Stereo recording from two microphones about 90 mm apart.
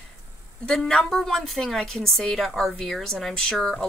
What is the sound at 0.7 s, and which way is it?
A woman's voice, 5° left (ahead or behind).